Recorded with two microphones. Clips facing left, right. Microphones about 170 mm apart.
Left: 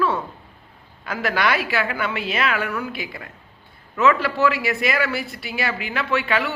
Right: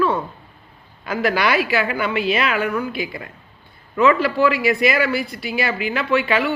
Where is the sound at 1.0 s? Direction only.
5° right (ahead or behind).